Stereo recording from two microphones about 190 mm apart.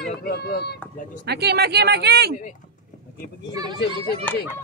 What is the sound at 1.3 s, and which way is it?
Speech, 60° right (ahead or behind).